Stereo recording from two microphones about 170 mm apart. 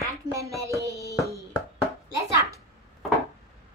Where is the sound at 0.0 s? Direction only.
20° right (ahead or behind).